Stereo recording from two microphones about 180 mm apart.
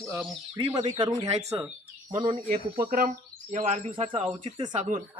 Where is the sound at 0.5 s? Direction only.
25° right (ahead or behind).